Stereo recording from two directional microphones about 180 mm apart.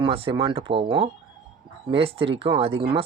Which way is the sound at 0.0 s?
30° right (ahead or behind).